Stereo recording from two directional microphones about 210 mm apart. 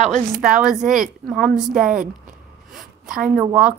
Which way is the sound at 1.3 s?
40° right (ahead or behind).